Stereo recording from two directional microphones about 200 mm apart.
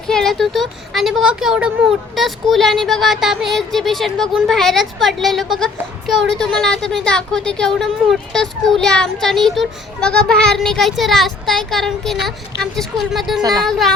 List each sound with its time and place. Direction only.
0.1 s speech: centre (ahead or behind)
13.4 s speech: 20° right (ahead or behind)
13.7 s speech: centre (ahead or behind)